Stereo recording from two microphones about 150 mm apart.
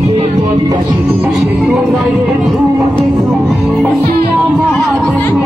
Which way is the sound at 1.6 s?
Centre (ahead or behind).